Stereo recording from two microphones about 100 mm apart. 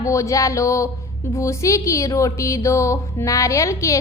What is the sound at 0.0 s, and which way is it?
A woman's voice, 30° left (ahead or behind).